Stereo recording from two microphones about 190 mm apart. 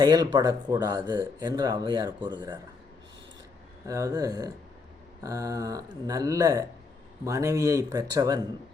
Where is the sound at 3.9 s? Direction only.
15° right (ahead or behind).